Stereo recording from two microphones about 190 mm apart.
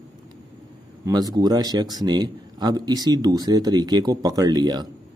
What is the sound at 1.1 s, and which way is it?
Speech, 20° right (ahead or behind).